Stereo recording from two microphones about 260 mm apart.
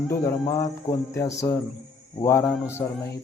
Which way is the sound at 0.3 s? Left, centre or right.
Centre.